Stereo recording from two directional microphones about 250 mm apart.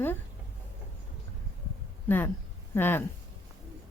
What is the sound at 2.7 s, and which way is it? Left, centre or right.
Speech, centre.